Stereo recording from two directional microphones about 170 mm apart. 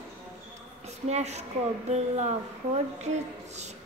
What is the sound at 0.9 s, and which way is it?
Speech, 40° right (ahead or behind).